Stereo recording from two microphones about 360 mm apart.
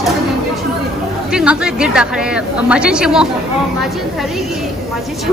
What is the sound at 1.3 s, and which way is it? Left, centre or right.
A woman's voice, centre.